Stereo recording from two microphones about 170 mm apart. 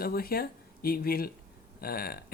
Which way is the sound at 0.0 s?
60° left (ahead or behind).